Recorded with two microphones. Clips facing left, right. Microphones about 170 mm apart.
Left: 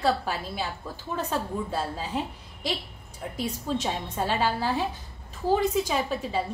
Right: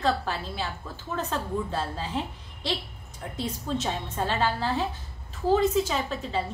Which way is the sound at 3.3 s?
10° left (ahead or behind).